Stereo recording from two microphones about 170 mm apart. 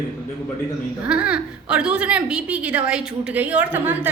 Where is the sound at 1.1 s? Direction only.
5° right (ahead or behind).